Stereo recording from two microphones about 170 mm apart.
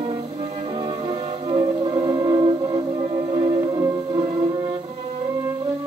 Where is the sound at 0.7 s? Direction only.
25° right (ahead or behind).